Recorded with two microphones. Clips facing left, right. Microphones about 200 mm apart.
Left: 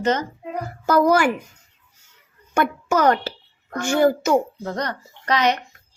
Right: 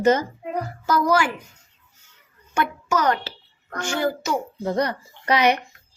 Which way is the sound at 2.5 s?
55° left (ahead or behind).